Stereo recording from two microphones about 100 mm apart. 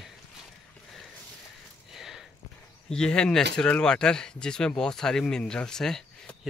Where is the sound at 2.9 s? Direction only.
10° left (ahead or behind).